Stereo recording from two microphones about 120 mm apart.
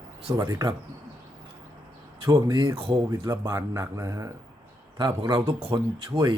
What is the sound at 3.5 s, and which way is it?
Speech, 25° right (ahead or behind).